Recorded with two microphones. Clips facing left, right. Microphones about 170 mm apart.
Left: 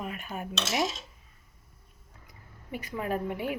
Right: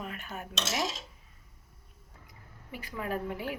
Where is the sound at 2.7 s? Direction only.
20° left (ahead or behind).